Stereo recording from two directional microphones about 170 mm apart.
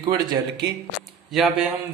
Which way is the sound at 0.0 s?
25° right (ahead or behind).